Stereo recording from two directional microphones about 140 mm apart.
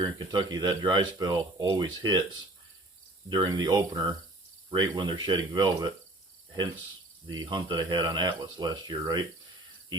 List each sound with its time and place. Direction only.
0.0 s speech: 30° right (ahead or behind)
7.3 s speech: 35° right (ahead or behind)